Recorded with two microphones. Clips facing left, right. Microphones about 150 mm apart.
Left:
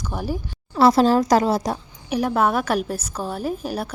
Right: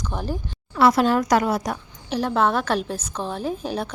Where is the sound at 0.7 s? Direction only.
30° left (ahead or behind).